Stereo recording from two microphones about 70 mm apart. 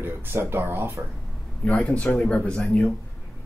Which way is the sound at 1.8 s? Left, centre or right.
Centre.